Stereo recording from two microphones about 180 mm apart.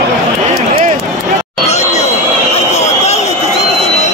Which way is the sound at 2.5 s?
40° left (ahead or behind).